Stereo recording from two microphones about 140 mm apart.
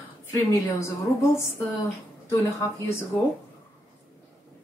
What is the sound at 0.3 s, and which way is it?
Speech, 20° left (ahead or behind).